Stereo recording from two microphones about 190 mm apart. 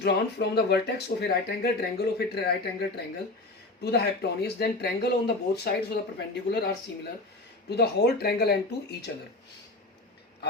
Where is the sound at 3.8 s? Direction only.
60° left (ahead or behind).